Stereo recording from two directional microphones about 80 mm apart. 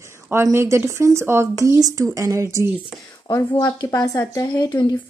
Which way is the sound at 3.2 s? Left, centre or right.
Left.